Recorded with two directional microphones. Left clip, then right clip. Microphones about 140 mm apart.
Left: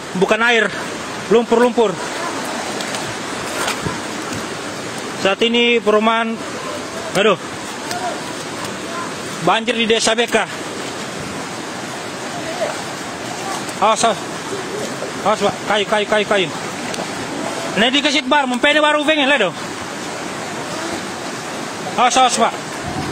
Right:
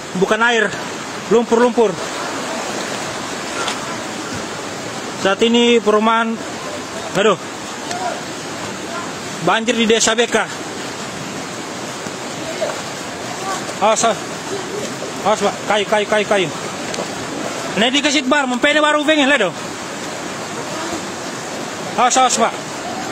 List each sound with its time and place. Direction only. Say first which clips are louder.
0.4 s speech: even; 15° left (ahead or behind)
1.3 s a man's voice: even; centre (ahead or behind)
5.2 s a man's voice: right 1 dB; centre (ahead or behind)
9.5 s a man's voice: right 1 dB; 5° right (ahead or behind)
13.7 s speech: even; centre (ahead or behind)
15.4 s a man's voice: even; 5° right (ahead or behind)
17.7 s a man's voice: even; centre (ahead or behind)
21.9 s speech: even; 10° right (ahead or behind)